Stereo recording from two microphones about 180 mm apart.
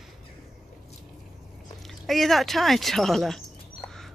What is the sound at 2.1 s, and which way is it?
Speech, centre (ahead or behind).